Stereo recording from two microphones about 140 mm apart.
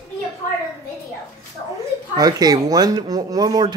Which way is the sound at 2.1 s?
30° right (ahead or behind).